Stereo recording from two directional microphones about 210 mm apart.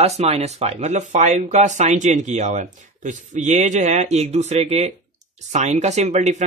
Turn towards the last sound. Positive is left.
turn(degrees=-35)  # may be behind; listen again after turning